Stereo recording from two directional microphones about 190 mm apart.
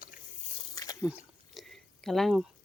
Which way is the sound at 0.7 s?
20° left (ahead or behind).